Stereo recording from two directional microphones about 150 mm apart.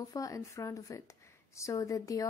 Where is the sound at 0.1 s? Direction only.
20° left (ahead or behind).